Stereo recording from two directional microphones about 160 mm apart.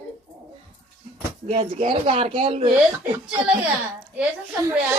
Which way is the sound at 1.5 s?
40° right (ahead or behind).